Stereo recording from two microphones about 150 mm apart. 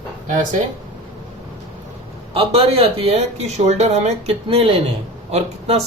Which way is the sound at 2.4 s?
40° right (ahead or behind).